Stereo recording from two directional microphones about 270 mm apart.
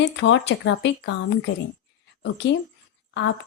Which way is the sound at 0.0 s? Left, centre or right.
Left.